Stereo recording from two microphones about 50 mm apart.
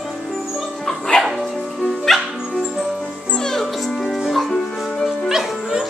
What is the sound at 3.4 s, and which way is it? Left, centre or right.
Music, centre.